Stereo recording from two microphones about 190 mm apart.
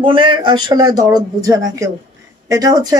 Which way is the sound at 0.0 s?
25° right (ahead or behind).